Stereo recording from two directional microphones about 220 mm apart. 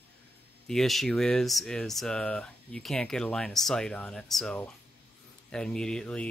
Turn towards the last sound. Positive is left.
turn(degrees=5)  # may be behind; listen again after turning